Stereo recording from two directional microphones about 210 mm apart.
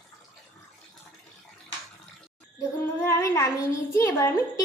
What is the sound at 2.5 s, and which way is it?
Female singing, 15° left (ahead or behind).